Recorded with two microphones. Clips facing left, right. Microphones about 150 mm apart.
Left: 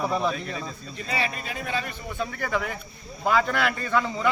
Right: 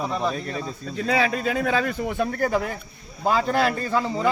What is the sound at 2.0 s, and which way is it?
Speech, 90° right.